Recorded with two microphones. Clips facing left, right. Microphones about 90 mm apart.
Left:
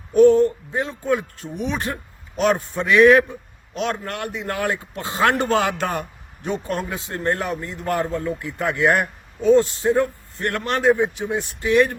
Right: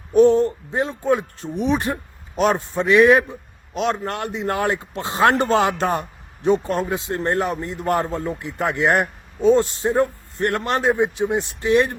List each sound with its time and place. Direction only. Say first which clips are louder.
0.1 s speech: left 1 dB; 25° right (ahead or behind)